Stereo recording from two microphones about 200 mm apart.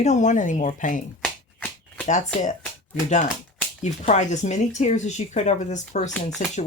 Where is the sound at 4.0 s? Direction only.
35° left (ahead or behind).